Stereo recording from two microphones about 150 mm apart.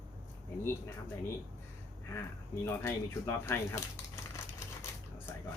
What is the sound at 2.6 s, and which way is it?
Speech, 15° left (ahead or behind).